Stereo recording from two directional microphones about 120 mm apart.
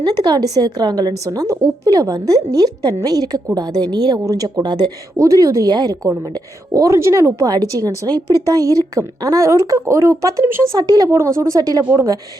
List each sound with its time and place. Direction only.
0.0 s a woman's voice: 35° right (ahead or behind)